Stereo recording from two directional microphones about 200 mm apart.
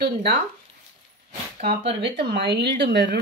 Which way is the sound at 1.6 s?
30° right (ahead or behind).